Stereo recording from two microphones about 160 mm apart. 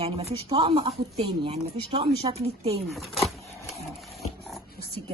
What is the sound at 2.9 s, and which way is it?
Speech, centre (ahead or behind).